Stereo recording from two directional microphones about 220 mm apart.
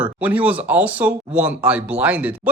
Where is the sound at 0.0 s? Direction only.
5° right (ahead or behind).